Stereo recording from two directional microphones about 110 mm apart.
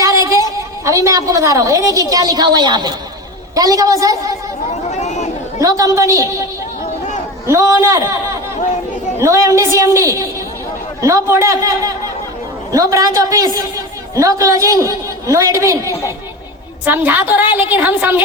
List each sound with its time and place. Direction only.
0.0 s a sound: 30° right (ahead or behind)
0.9 s a woman's voice: 30° right (ahead or behind)
4.8 s chatter: 90° left
5.5 s a man's voice: 30° right (ahead or behind)
7.4 s a man's voice: 25° right (ahead or behind)
15.9 s a woman's voice: 30° left (ahead or behind)
16.8 s a woman's voice: 15° right (ahead or behind)